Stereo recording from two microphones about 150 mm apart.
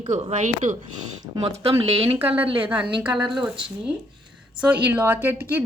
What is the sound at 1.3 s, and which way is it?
Speech, 20° right (ahead or behind).